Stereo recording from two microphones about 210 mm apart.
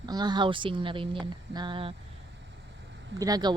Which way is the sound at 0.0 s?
20° right (ahead or behind).